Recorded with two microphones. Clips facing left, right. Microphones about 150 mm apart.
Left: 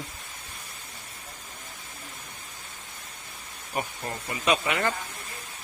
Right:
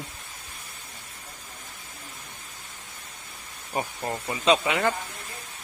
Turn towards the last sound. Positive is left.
turn(degrees=-15)  # may be behind; listen again after turning